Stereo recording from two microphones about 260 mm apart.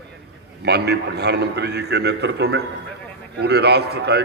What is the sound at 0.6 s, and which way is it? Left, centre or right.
A man's voice, right.